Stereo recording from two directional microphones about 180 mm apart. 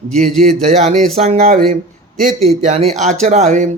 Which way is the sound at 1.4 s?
50° right (ahead or behind).